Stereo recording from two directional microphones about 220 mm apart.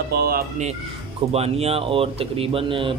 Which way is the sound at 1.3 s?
30° right (ahead or behind).